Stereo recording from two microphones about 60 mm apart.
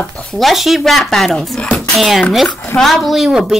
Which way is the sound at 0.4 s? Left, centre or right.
Centre.